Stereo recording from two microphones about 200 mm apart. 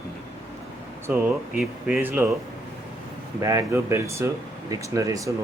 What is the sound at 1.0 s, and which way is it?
Speech, 10° right (ahead or behind).